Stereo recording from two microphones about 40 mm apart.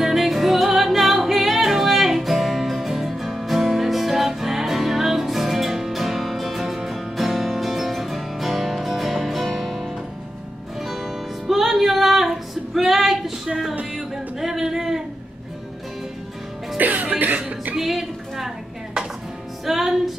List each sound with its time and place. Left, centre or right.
0.0 s music: centre
16.7 s music: right
17.7 s a sound: centre
19.6 s music: centre